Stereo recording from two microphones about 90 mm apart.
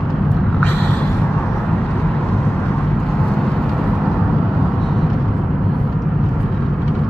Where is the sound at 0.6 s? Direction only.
15° left (ahead or behind).